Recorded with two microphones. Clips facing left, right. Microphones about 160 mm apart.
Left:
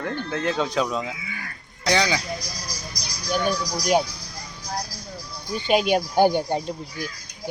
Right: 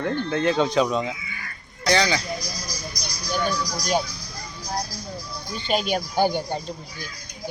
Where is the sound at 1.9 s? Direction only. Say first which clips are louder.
Right 1 dB; 15° left (ahead or behind).